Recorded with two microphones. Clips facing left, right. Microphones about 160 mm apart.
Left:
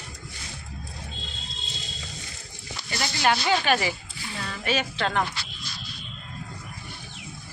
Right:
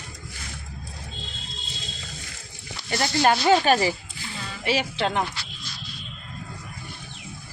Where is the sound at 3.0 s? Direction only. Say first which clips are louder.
Right 4 dB; 40° right (ahead or behind).